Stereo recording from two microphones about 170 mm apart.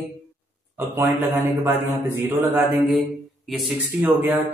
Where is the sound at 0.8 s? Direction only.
15° right (ahead or behind).